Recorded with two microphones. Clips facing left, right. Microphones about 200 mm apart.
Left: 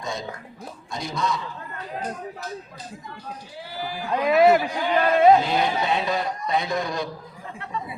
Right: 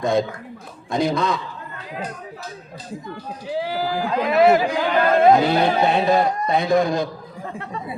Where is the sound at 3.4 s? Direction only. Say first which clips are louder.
Right 12 dB; 90° right; by 7.8 s 45° right (ahead or behind).